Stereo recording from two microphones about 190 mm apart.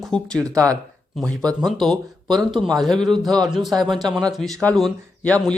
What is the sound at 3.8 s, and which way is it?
Speech, 25° right (ahead or behind).